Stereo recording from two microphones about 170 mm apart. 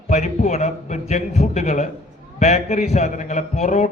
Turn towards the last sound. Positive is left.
turn(degrees=40)  # may be behind; listen again after turning